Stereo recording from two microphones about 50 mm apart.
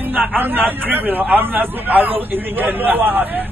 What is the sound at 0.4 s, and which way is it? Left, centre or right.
A man's voice, right.